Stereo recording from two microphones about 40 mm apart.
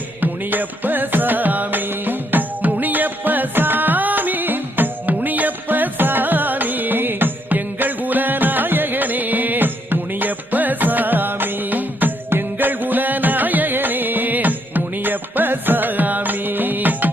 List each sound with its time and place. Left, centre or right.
0.2 s music: right